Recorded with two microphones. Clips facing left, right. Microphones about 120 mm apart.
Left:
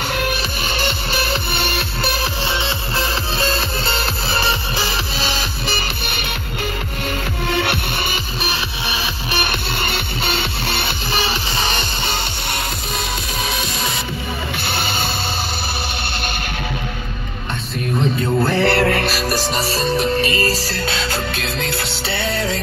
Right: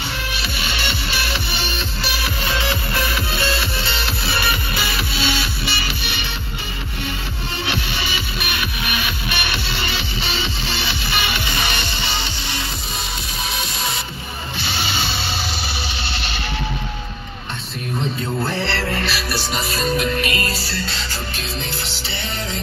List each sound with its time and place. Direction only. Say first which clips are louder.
0.1 s music: left 6 dB; 50° left (ahead or behind)
2.4 s music: even; 25° left (ahead or behind); by 6.3 s 50° left (ahead or behind)
7.4 s music: left 5 dB; 60° left (ahead or behind)
8.4 s music: left 2 dB; 30° left (ahead or behind); by 11.0 s 55° left (ahead or behind)
11.1 s music: left 2 dB; 35° left (ahead or behind)
14.6 s music: right 1 dB; 50° left (ahead or behind)
18.4 s music: left 9 dB; 55° left (ahead or behind)
19.1 s music: left 4 dB; 40° left (ahead or behind)
20.8 s music: left 6 dB; 60° left (ahead or behind)